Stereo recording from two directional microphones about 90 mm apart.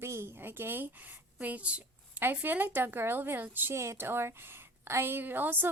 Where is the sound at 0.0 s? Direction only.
30° right (ahead or behind).